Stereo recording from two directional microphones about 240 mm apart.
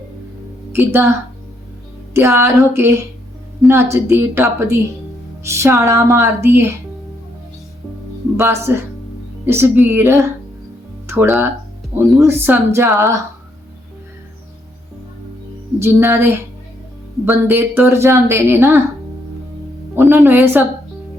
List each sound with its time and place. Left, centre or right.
0.7 s a woman's voice: centre
2.1 s a woman's voice: centre
3.6 s a woman's voice: centre
3.9 s a woman's voice: centre
8.4 s a woman's voice: centre
15.8 s a woman's voice: centre
20.2 s a woman's voice: centre